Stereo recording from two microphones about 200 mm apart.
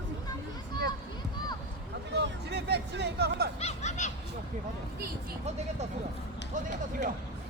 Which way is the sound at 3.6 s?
35° left (ahead or behind).